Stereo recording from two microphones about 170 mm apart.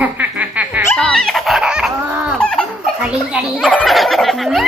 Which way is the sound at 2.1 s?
10° right (ahead or behind).